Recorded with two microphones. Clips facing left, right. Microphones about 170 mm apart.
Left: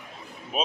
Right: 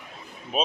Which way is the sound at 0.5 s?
Centre (ahead or behind).